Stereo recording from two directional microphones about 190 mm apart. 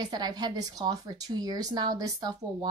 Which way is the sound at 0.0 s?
20° right (ahead or behind).